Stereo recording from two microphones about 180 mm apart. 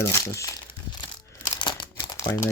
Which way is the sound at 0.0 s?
15° left (ahead or behind).